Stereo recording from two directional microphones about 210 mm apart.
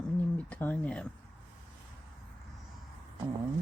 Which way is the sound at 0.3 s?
5° left (ahead or behind).